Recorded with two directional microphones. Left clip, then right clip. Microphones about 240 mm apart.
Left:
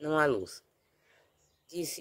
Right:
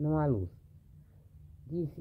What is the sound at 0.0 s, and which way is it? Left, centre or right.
Speech, left.